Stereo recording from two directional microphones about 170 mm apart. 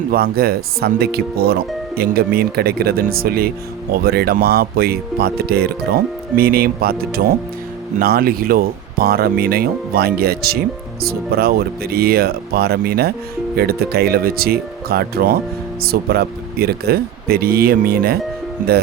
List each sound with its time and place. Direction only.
0.1 s speech: 60° right (ahead or behind)